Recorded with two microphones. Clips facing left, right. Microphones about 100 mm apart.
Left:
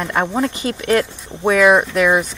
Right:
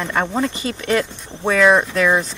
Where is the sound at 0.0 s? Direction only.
5° left (ahead or behind).